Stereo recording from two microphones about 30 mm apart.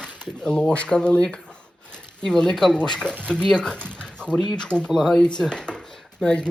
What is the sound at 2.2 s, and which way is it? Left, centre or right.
Speech, left.